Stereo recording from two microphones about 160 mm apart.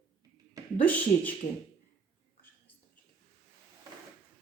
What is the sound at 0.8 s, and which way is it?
Speech, 10° left (ahead or behind).